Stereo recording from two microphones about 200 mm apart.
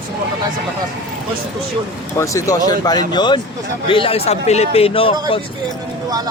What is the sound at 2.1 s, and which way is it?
A man's voice, 15° left (ahead or behind).